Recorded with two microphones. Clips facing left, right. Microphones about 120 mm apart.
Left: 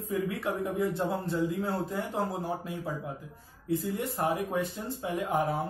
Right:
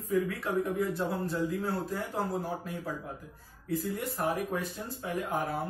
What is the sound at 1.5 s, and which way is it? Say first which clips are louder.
Speech: left 1 dB; 20° left (ahead or behind).